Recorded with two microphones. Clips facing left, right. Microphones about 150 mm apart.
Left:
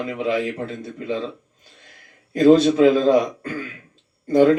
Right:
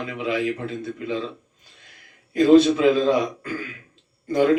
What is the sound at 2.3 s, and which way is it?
Speech, 40° left (ahead or behind).